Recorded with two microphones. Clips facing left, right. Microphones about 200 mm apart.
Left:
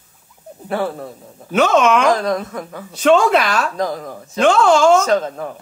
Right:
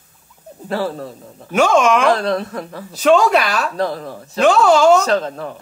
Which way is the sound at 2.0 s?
30° right (ahead or behind).